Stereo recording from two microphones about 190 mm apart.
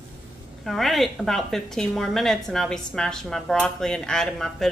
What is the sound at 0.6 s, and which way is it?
A woman's voice, centre (ahead or behind).